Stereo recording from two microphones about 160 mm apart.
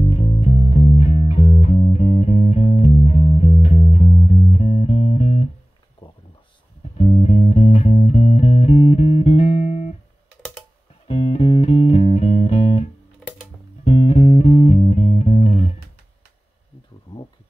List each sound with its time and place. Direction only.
0.1 s music: 40° left (ahead or behind)
6.0 s a sound: 30° left (ahead or behind)
7.0 s music: 35° left (ahead or behind)
11.1 s music: 40° left (ahead or behind)